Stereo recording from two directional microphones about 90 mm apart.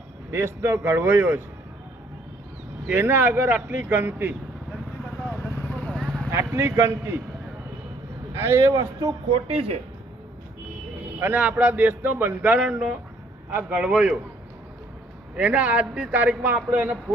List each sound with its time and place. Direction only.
0.3 s speech: 30° right (ahead or behind)
2.9 s speech: 25° right (ahead or behind)
5.7 s vehicle: 10° left (ahead or behind)
6.3 s speech: 30° right (ahead or behind)
8.3 s a man's voice: 25° right (ahead or behind)
9.3 s speech: 90° right
11.1 s a man's voice: 20° right (ahead or behind)
15.3 s a man's voice: 15° right (ahead or behind)